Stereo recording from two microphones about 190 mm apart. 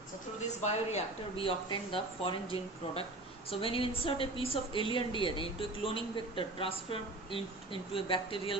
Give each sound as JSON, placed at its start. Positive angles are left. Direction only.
{"t": 0.4, "sound": "a woman's voice", "side_deg": 35}